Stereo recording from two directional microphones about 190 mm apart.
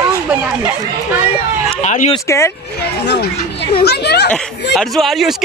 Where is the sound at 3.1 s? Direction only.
65° left (ahead or behind).